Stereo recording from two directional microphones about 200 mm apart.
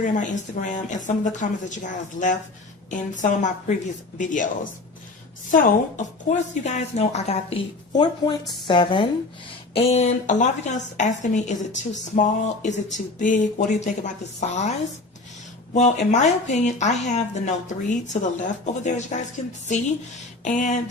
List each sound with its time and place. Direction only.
0.0 s speech: 40° left (ahead or behind)
5.5 s a woman's voice: 40° left (ahead or behind)
15.7 s speech: 35° left (ahead or behind)
20.4 s speech: 40° left (ahead or behind)